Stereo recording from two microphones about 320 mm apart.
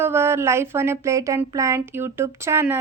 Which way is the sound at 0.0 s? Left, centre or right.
Centre.